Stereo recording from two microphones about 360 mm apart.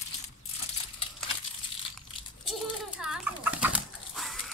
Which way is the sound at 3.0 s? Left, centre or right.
Centre.